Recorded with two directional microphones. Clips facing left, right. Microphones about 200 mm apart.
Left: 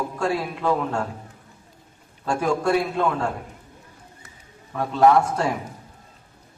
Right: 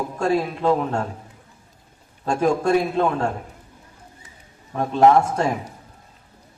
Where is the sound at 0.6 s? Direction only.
25° right (ahead or behind).